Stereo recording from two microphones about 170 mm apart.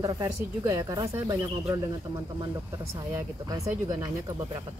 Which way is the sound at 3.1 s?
15° right (ahead or behind).